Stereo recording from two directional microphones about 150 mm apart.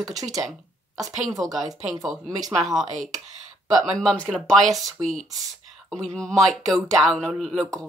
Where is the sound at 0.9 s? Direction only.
25° right (ahead or behind).